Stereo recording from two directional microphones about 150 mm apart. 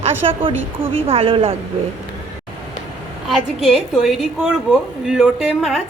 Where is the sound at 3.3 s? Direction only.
5° left (ahead or behind).